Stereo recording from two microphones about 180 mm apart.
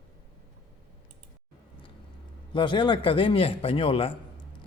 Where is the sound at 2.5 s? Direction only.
25° left (ahead or behind).